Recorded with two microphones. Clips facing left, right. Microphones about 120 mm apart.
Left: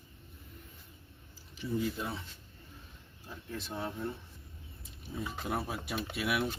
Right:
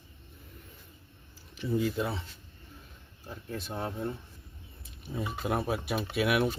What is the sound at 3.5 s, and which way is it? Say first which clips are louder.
Speech: right 3 dB; 50° right (ahead or behind).